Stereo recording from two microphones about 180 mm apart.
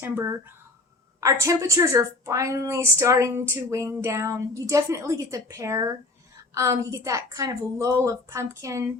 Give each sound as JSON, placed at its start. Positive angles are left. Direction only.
{"t": 0.0, "sound": "a woman's voice", "side_deg": -15}